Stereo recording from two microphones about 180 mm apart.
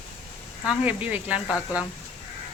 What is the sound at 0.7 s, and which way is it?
Speech, 5° right (ahead or behind).